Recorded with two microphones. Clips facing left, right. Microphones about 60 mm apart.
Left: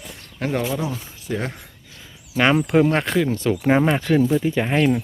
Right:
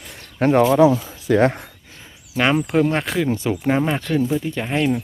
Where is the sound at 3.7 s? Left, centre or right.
Centre.